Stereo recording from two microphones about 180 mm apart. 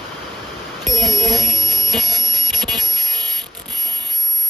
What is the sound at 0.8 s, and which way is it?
Music, centre (ahead or behind).